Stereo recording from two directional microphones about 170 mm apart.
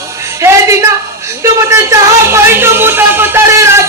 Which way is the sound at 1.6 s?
15° right (ahead or behind).